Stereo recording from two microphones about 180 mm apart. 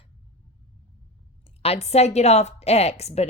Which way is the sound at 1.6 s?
35° left (ahead or behind).